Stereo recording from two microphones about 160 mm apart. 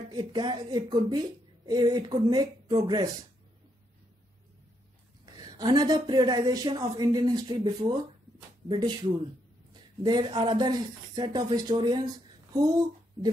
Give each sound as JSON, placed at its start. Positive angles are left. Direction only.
{"t": 0.1, "sound": "a woman's voice", "side_deg": -25}
{"t": 5.2, "sound": "a woman's voice", "side_deg": -25}
{"t": 10.0, "sound": "a woman's voice", "side_deg": -30}